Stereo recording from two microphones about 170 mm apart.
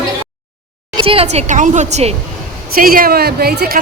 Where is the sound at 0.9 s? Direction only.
35° right (ahead or behind).